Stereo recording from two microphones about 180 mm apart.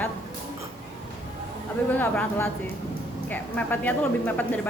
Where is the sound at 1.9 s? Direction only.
10° left (ahead or behind).